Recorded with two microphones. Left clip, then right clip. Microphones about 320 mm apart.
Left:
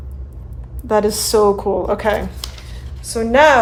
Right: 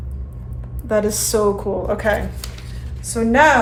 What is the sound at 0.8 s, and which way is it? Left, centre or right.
A woman's voice, left.